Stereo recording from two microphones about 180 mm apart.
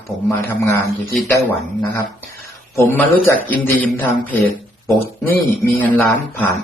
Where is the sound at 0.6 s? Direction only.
15° left (ahead or behind).